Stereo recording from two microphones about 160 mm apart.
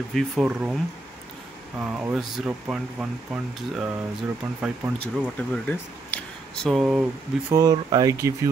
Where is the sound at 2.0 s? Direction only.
5° right (ahead or behind).